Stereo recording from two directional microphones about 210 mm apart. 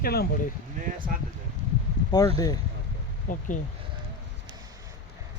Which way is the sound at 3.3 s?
40° left (ahead or behind).